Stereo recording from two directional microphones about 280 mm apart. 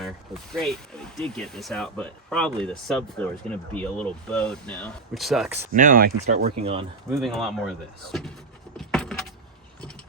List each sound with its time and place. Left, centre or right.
0.5 s speech: centre
5.7 s speech: right
6.6 s speech: right
7.2 s speech: centre
8.8 s vehicle: centre